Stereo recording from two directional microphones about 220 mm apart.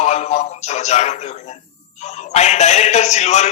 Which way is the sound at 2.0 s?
30° left (ahead or behind).